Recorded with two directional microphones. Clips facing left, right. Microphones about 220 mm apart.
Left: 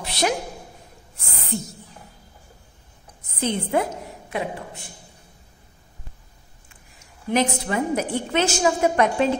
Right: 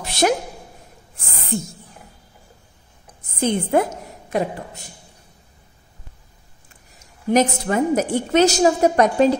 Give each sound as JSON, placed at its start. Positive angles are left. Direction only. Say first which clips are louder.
{"t": 0.0, "sound": "a sound", "louder": "right 5 dB", "side_deg": -45}
{"t": 1.5, "sound": "speech", "louder": "right 4 dB", "side_deg": -50}
{"t": 3.3, "sound": "a woman's voice", "louder": "right 4 dB", "side_deg": -50}
{"t": 7.2, "sound": "a woman's voice", "louder": "right 4 dB", "side_deg": -45}